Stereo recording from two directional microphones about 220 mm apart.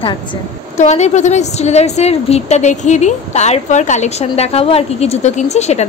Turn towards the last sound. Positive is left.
turn(degrees=30)  # may be behind; listen again after turning